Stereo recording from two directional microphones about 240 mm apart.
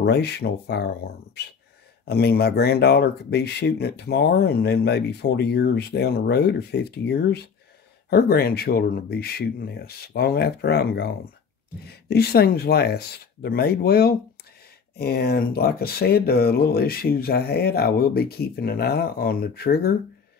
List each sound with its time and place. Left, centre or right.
0.0 s speech: left